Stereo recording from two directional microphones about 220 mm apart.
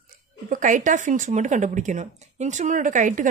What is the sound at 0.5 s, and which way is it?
Speech, 35° right (ahead or behind).